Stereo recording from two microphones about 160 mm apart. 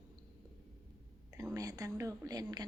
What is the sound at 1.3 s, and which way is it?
Speech, 20° right (ahead or behind).